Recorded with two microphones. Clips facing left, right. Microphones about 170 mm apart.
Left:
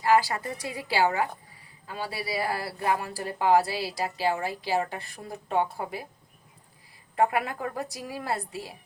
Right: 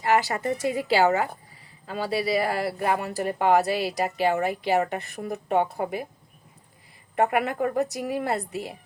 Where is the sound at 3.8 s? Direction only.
20° right (ahead or behind).